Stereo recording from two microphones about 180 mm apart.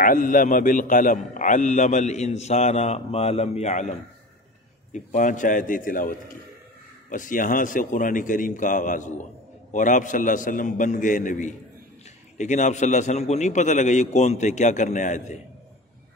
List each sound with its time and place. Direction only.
0.0 s a man's voice: 50° left (ahead or behind)
4.9 s a man's voice: 45° left (ahead or behind)